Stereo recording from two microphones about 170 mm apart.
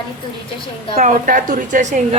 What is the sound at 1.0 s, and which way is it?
A woman's voice, 45° right (ahead or behind).